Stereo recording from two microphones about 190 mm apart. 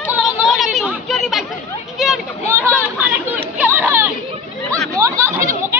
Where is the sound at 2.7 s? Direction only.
10° right (ahead or behind).